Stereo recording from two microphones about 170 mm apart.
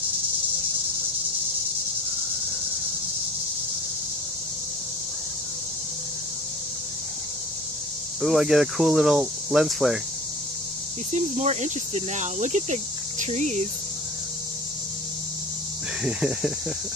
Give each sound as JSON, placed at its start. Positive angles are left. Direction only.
{"t": 8.2, "sound": "speech", "side_deg": 0}
{"t": 11.1, "sound": "speech", "side_deg": -45}
{"t": 16.0, "sound": "speech", "side_deg": -5}